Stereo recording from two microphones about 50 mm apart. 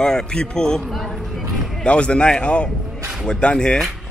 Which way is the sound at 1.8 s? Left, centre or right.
Left.